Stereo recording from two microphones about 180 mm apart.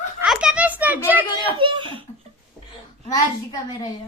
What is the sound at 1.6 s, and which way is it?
Speech, 25° right (ahead or behind).